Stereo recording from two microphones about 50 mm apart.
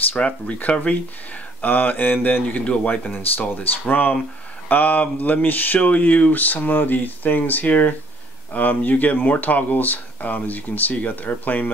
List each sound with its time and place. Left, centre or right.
0.1 s speech: left
1.6 s speech: left
2.6 s speech: left
3.1 s speech: left